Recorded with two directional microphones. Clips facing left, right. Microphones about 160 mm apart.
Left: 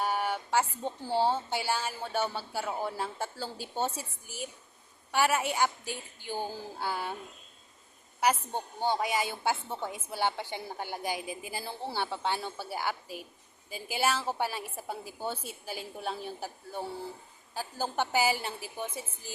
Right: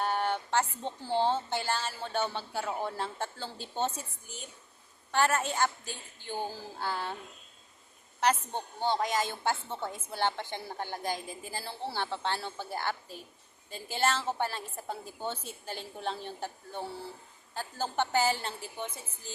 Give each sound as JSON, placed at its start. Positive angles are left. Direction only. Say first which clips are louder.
{"t": 0.0, "sound": "speech", "louder": "even", "side_deg": 5}
{"t": 8.2, "sound": "speech", "louder": "even", "side_deg": 10}